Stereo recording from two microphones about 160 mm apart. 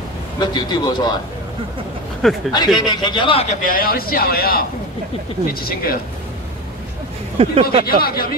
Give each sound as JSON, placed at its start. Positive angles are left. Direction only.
{"t": 0.4, "sound": "a man's voice", "side_deg": 25}
{"t": 2.5, "sound": "a man's voice", "side_deg": 25}
{"t": 3.6, "sound": "a man's voice", "side_deg": 65}
{"t": 7.3, "sound": "speech", "side_deg": -40}
{"t": 7.8, "sound": "a man's voice", "side_deg": 70}